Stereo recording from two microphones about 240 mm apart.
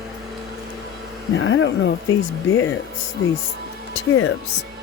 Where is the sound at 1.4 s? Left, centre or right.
Left.